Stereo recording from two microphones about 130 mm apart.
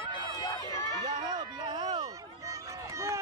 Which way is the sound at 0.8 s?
30° right (ahead or behind).